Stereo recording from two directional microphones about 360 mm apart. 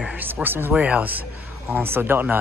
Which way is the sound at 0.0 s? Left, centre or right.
Centre.